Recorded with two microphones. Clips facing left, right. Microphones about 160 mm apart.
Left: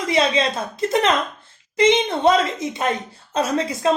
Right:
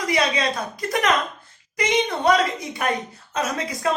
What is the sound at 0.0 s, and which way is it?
A woman's voice, 25° left (ahead or behind).